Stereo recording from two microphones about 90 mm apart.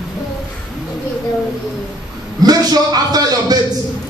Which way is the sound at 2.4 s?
45° right (ahead or behind).